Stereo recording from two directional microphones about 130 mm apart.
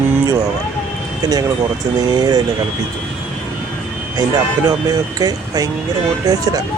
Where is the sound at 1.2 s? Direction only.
30° right (ahead or behind).